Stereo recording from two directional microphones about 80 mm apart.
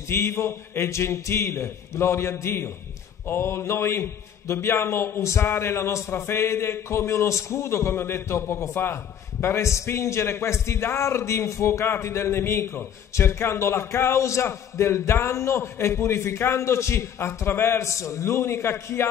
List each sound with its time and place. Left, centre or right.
0.1 s a man's voice: left